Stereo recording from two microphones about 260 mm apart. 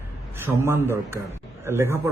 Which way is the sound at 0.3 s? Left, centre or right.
Centre.